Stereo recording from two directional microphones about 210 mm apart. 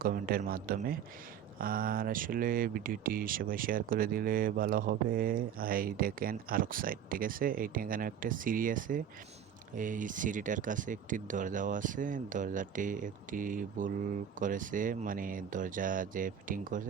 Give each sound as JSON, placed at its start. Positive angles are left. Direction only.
{"t": 0.0, "sound": "speech", "side_deg": -45}